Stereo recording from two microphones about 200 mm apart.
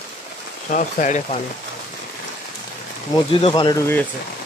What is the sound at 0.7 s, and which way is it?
Speech, 40° left (ahead or behind).